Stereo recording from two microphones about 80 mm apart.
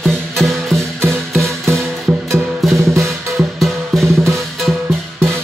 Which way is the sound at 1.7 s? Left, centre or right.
Right.